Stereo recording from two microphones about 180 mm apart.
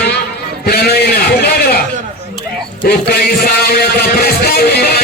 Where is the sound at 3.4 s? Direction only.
60° left (ahead or behind).